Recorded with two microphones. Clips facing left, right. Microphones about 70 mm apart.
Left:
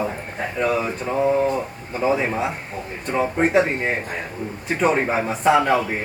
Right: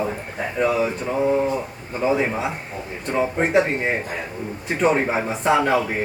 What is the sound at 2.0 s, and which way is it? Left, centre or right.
Speech, centre.